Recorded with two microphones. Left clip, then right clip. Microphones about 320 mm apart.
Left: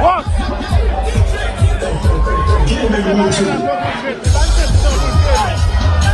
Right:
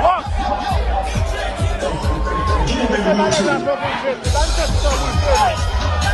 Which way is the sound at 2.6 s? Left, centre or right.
Right.